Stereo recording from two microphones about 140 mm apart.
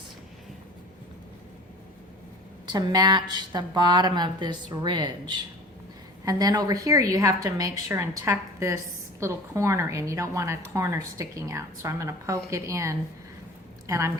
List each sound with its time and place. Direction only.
2.6 s a woman's voice: 30° right (ahead or behind)
6.2 s a woman's voice: 25° right (ahead or behind)